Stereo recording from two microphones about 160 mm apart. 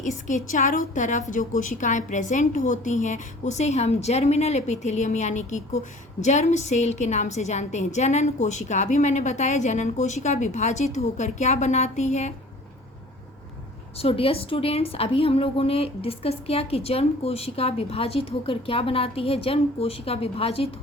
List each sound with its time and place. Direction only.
0.0 s a woman's voice: 50° left (ahead or behind)
13.9 s a woman's voice: 35° left (ahead or behind)